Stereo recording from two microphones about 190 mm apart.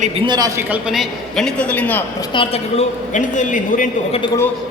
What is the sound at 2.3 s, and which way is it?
A woman's voice, 35° left (ahead or behind).